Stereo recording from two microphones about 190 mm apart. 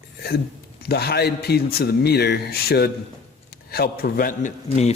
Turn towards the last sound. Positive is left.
turn(degrees=35)  # may be behind; listen again after turning